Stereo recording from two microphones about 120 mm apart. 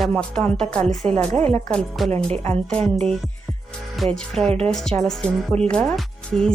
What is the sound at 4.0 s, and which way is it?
Speech, 5° left (ahead or behind).